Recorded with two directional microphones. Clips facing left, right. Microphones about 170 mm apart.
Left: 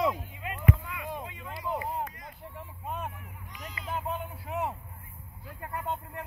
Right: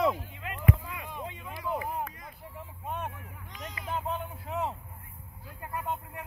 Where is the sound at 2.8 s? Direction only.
Centre (ahead or behind).